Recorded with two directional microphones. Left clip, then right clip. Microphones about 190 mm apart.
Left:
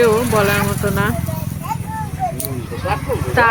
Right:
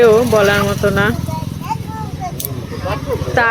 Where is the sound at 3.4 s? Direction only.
15° right (ahead or behind).